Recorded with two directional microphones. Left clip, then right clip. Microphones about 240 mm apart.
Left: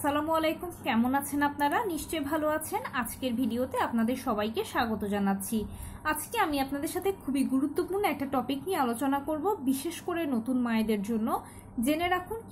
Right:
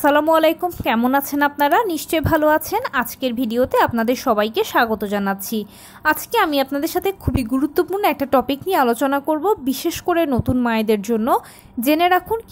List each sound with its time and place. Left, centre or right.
0.0 s a woman's voice: right